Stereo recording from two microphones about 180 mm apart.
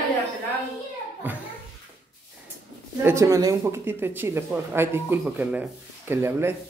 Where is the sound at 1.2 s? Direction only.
10° right (ahead or behind).